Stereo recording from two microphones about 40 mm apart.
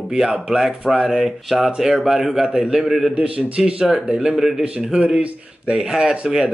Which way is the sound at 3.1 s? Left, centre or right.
Right.